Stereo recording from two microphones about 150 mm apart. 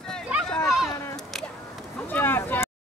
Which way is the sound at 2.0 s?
15° left (ahead or behind).